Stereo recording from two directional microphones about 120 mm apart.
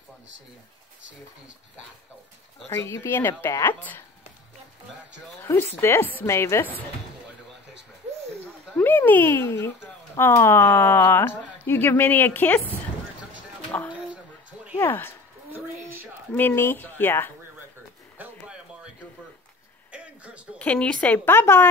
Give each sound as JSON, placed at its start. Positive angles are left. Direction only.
{"t": 2.7, "sound": "a woman's voice", "side_deg": 20}
{"t": 5.4, "sound": "a woman's voice", "side_deg": 15}
{"t": 8.7, "sound": "a woman's voice", "side_deg": 15}
{"t": 14.8, "sound": "speech", "side_deg": 20}
{"t": 15.5, "sound": "a woman's voice", "side_deg": -15}
{"t": 16.3, "sound": "a woman's voice", "side_deg": 20}
{"t": 18.1, "sound": "a sound", "side_deg": -15}
{"t": 19.9, "sound": "a sound", "side_deg": -10}
{"t": 20.5, "sound": "a woman's voice", "side_deg": 10}